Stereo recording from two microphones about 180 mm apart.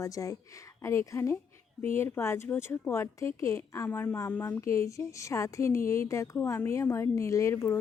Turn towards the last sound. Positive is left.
turn(degrees=15)  # may be behind; listen again after turning